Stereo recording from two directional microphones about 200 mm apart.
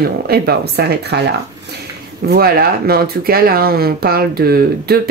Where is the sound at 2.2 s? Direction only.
50° right (ahead or behind).